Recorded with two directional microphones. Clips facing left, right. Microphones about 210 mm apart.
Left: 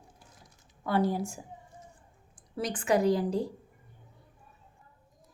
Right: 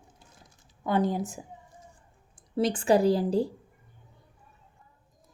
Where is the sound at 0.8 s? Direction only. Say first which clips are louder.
Right 2 dB; 20° right (ahead or behind).